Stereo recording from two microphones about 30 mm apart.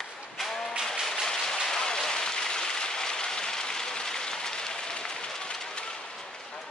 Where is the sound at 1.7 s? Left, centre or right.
Left.